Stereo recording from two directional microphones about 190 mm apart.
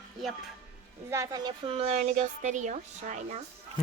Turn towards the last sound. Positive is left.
turn(degrees=-40)  # may be behind; listen again after turning